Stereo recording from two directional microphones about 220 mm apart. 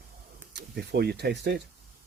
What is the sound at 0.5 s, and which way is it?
Speech, 50° right (ahead or behind).